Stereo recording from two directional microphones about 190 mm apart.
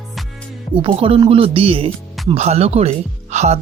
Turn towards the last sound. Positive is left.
turn(degrees=-35)  # may be behind; listen again after turning